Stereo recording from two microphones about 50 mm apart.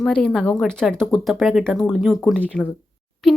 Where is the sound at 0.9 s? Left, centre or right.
Centre.